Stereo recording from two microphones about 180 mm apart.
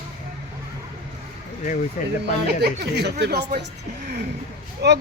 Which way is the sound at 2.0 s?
45° left (ahead or behind).